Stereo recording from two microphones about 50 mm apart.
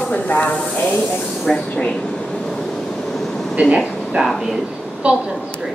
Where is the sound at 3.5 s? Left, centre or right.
Right.